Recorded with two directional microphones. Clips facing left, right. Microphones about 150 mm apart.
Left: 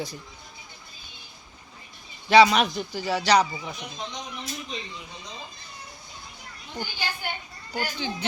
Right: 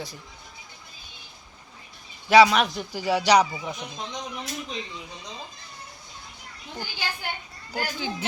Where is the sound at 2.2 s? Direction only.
5° right (ahead or behind).